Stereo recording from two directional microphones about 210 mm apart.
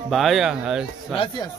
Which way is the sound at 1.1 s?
25° left (ahead or behind).